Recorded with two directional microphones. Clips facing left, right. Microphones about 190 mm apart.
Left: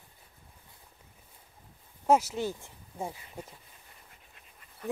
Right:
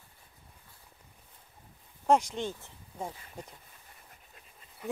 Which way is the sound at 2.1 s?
5° left (ahead or behind).